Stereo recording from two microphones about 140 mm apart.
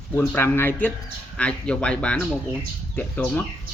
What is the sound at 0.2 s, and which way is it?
Speech, 15° left (ahead or behind).